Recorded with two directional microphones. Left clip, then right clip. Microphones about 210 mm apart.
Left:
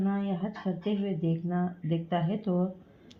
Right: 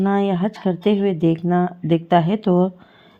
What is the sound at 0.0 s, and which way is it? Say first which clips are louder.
Speech: right 14 dB; 40° right (ahead or behind).